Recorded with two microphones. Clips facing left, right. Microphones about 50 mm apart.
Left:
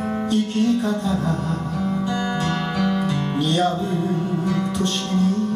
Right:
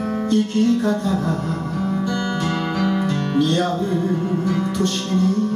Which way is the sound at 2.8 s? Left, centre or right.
Right.